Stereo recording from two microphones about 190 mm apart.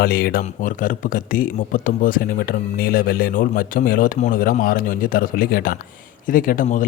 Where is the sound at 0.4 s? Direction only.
45° left (ahead or behind).